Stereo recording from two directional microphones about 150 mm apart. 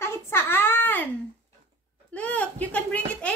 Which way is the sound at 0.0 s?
15° left (ahead or behind).